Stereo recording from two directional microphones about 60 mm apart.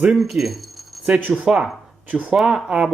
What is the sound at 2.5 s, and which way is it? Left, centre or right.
Speech, centre.